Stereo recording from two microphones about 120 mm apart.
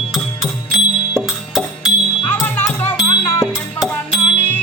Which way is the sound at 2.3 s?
15° left (ahead or behind).